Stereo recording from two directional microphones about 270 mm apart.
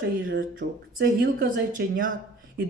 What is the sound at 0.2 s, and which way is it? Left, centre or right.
Speech, right.